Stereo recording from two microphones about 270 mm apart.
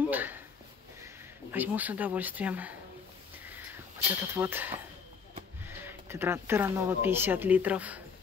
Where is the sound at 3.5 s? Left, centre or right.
Centre.